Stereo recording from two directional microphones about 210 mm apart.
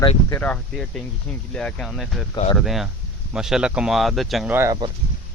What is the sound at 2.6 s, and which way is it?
Speech, centre (ahead or behind).